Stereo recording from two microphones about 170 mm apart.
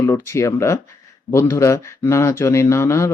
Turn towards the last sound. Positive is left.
turn(degrees=15)  # may be behind; listen again after turning